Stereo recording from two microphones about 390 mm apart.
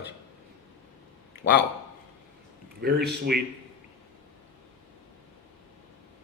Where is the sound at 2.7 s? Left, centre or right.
Right.